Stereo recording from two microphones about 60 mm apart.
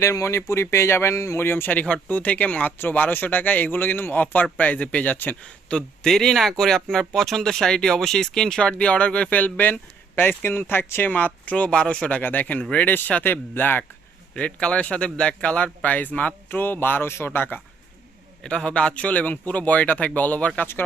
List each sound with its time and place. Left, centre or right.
0.0 s speech: left
1.8 s speech: left
5.1 s speech: left
5.4 s speech: centre
6.1 s speech: centre; by 13.8 s left
14.3 s speech: centre; by 17.6 s left
18.4 s speech: centre; by 20.9 s left